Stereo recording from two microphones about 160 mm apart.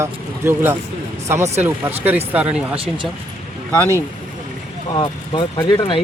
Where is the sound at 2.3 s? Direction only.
5° right (ahead or behind).